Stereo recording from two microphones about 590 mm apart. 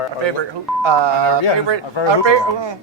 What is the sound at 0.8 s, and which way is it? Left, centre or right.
A man's voice, right.